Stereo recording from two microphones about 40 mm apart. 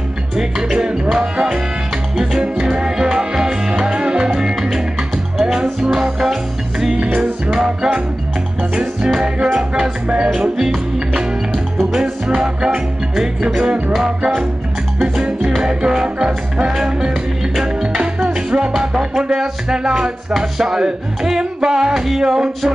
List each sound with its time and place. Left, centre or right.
1.1 s music: centre
7.5 s music: centre
9.4 s music: right
10.3 s music: centre
11.8 s music: centre
15.6 s music: centre
16.6 s music: centre
17.9 s music: centre
20.3 s music: centre